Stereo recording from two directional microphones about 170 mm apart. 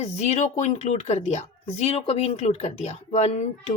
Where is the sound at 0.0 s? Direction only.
40° left (ahead or behind).